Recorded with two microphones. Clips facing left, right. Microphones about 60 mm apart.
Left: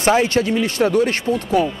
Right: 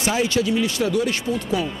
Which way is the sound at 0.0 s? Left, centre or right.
Left.